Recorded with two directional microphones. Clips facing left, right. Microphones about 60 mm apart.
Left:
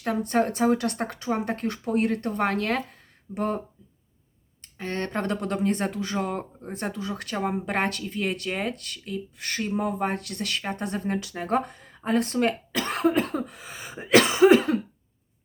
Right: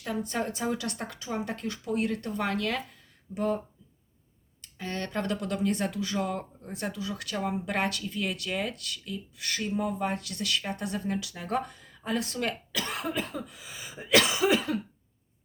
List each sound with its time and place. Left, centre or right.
0.0 s speech: left
4.6 s speech: left